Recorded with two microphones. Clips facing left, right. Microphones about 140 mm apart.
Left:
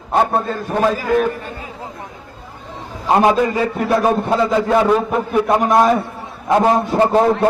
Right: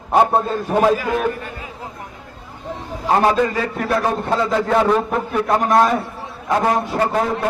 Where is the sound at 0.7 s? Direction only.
10° right (ahead or behind).